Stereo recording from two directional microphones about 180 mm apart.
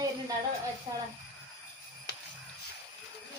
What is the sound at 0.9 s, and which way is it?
Speech, 20° right (ahead or behind).